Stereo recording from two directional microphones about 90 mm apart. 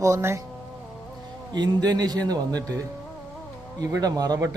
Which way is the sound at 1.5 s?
50° right (ahead or behind).